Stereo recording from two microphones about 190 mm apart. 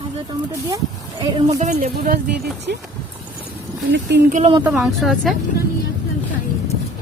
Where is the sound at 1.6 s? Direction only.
40° right (ahead or behind).